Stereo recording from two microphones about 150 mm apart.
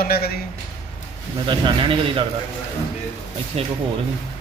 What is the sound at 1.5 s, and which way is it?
Speech, 35° right (ahead or behind).